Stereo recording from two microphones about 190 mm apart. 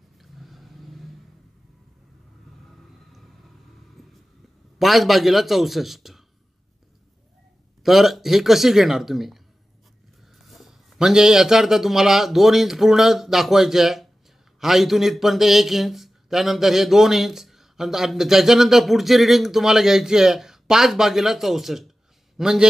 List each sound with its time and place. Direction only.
0.2 s vehicle: centre (ahead or behind)
4.7 s speech: centre (ahead or behind)
7.8 s speech: centre (ahead or behind)
10.4 s speech: centre (ahead or behind)